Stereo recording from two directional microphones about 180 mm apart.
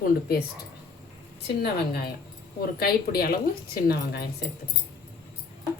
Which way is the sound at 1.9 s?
60° left (ahead or behind).